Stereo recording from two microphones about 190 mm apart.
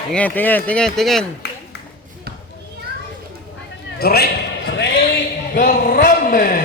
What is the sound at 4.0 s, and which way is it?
Speech, 55° left (ahead or behind).